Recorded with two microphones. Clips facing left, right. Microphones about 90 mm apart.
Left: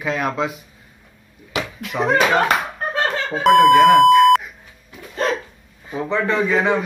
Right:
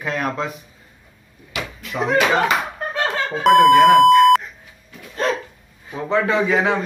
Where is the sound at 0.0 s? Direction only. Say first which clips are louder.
Left 2 dB; 5° left (ahead or behind).